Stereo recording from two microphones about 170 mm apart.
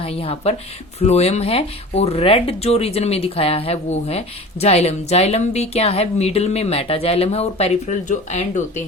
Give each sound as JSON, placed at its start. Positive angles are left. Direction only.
{"t": 0.0, "sound": "a woman's voice", "side_deg": 35}